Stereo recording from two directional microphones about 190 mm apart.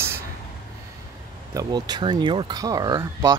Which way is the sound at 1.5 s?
20° right (ahead or behind).